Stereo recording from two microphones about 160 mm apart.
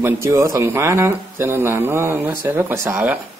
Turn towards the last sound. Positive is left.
turn(degrees=-10)  # may be behind; listen again after turning